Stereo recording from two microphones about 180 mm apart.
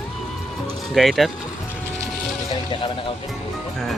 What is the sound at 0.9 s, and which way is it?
Speech, centre (ahead or behind).